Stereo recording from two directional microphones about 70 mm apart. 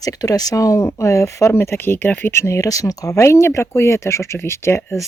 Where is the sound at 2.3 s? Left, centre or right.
Left.